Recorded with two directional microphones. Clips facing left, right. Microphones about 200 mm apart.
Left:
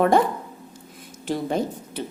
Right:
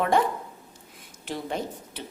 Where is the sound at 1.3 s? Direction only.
40° left (ahead or behind).